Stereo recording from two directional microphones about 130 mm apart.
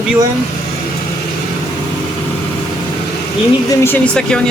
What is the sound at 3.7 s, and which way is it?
Speech, 20° left (ahead or behind).